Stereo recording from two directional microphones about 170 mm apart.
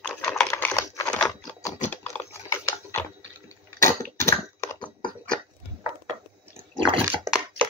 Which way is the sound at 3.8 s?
15° left (ahead or behind).